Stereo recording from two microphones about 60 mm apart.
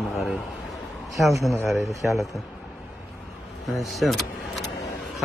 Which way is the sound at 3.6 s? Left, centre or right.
Centre.